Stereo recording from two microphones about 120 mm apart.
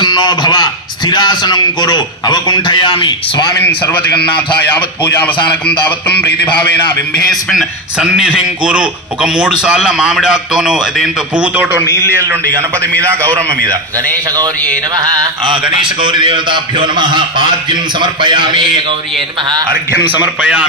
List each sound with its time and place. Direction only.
0.0 s a man's voice: 35° left (ahead or behind)
4.7 s a man's voice: 15° left (ahead or behind)
7.3 s a man's voice: centre (ahead or behind); by 14.5 s 30° right (ahead or behind)
15.4 s a man's voice: 45° right (ahead or behind)
20.1 s a man's voice: 10° right (ahead or behind)